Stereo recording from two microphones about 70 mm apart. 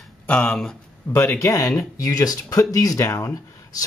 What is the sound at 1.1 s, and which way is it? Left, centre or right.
Speech, left.